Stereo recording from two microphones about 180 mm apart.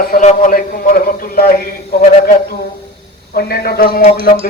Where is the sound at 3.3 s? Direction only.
60° left (ahead or behind).